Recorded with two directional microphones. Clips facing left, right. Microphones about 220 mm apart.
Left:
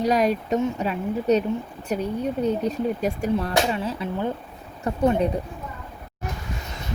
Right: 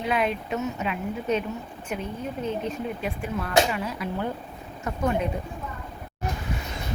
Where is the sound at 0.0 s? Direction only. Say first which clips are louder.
Left 5 dB; 40° left (ahead or behind).